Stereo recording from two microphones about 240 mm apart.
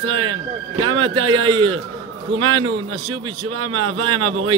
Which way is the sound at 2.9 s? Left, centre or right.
Right.